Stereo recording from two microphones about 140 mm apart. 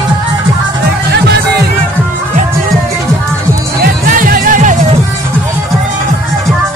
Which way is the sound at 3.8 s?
85° right.